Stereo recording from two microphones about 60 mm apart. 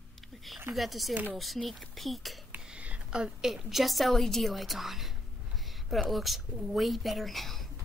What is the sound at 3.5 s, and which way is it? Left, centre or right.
A woman's voice, centre.